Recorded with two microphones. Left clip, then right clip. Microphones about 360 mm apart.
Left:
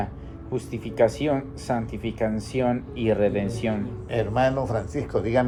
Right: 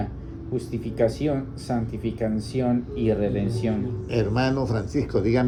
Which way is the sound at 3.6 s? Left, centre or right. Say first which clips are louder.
Even; left.